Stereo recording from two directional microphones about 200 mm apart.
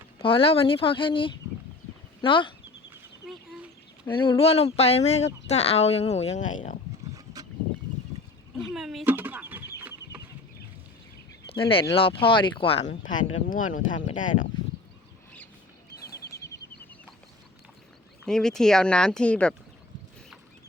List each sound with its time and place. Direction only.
0.2 s speech: 25° left (ahead or behind)
2.9 s chicken: 5° right (ahead or behind)
4.1 s a woman's voice: 25° left (ahead or behind); by 6.7 s 40° left (ahead or behind)
8.7 s chicken: centre (ahead or behind)
11.5 s speech: 25° left (ahead or behind)
13.1 s a woman's voice: 40° left (ahead or behind)
16.3 s a sound: 15° left (ahead or behind)
18.3 s speech: 5° left (ahead or behind)